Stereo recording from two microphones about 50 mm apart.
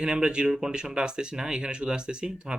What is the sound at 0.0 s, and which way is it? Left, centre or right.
Speech, centre.